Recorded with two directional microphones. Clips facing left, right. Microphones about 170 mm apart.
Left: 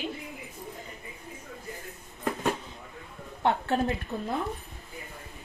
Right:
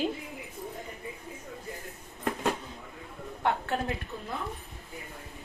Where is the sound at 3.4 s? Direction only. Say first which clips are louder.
Left 4 dB; 30° left (ahead or behind).